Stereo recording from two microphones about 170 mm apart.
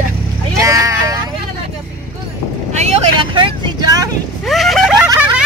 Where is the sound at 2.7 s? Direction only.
40° right (ahead or behind).